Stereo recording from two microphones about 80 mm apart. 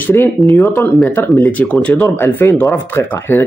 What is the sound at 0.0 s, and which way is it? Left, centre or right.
Speech, left.